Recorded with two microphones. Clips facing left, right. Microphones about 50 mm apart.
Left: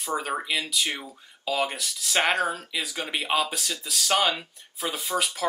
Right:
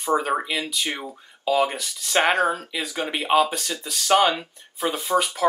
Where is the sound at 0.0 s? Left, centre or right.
Centre.